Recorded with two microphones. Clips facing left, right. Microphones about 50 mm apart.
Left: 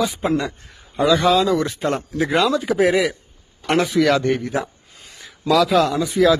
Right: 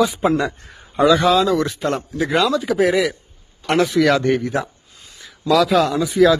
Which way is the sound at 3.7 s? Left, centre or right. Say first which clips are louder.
Right 1 dB; centre.